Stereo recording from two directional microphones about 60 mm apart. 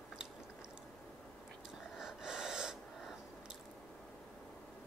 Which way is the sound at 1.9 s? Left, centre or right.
Centre.